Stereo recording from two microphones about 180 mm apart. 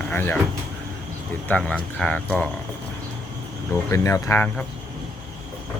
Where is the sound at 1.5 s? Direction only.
10° left (ahead or behind).